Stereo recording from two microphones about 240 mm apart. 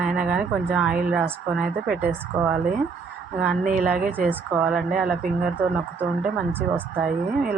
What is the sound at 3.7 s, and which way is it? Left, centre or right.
Speech, centre.